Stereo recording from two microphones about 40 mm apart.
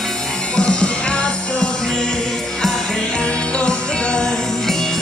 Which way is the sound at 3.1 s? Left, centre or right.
Left.